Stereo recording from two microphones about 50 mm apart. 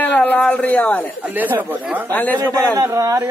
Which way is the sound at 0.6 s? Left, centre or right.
Left.